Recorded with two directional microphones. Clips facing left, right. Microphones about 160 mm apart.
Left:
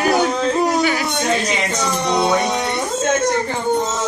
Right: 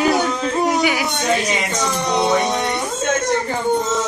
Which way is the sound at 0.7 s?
15° right (ahead or behind).